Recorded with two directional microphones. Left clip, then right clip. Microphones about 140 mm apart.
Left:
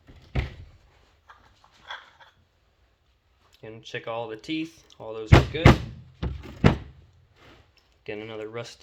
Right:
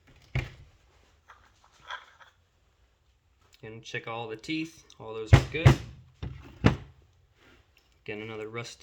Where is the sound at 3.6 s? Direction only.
60° right (ahead or behind).